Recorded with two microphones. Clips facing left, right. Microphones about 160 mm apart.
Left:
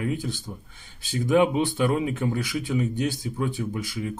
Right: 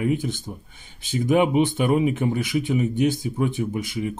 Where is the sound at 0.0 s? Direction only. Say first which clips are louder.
Right 5 dB; 20° right (ahead or behind).